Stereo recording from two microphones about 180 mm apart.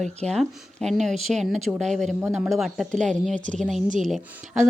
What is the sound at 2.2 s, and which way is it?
Speech, 10° right (ahead or behind).